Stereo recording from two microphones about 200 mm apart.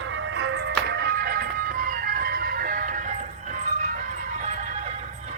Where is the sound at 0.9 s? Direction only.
50° right (ahead or behind).